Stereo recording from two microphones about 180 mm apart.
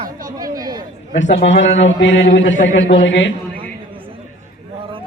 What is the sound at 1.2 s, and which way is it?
A man's voice, 85° left.